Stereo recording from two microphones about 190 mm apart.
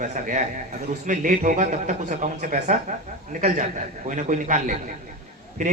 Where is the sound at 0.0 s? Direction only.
40° right (ahead or behind).